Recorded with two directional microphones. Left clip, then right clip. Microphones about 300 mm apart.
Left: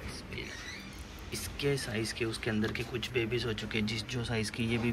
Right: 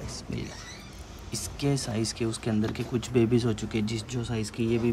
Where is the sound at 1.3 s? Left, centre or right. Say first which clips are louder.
Right 2 dB; centre.